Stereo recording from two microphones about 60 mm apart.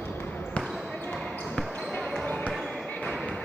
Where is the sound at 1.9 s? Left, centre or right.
Centre.